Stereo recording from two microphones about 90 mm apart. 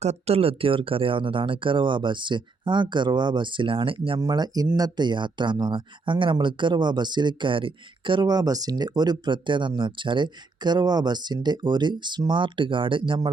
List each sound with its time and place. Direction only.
0.3 s speech: 90° right
4.2 s speech: 45° right (ahead or behind)
4.8 s speech: 55° right (ahead or behind)